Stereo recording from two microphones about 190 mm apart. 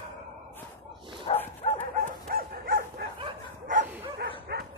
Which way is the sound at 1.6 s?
30° left (ahead or behind).